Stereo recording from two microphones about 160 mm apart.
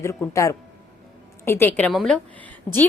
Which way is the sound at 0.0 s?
20° left (ahead or behind).